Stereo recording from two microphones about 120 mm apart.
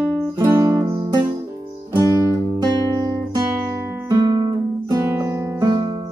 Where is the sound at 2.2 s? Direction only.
35° right (ahead or behind).